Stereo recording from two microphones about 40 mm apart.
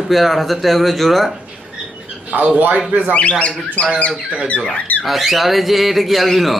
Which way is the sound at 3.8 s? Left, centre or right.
Left.